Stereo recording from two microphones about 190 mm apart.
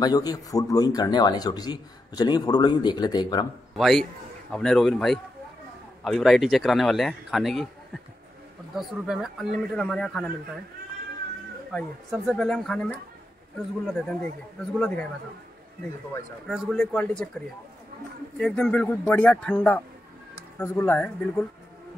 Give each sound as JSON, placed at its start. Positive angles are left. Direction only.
{"t": 0.0, "sound": "a man's voice", "side_deg": 20}
{"t": 3.7, "sound": "a man's voice", "side_deg": 0}
{"t": 8.7, "sound": "speech", "side_deg": 0}
{"t": 11.7, "sound": "speech", "side_deg": 0}
{"t": 16.4, "sound": "speech", "side_deg": 0}
{"t": 18.4, "sound": "speech", "side_deg": 5}